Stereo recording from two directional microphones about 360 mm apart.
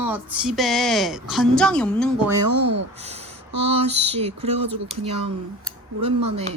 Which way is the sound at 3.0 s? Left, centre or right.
Centre.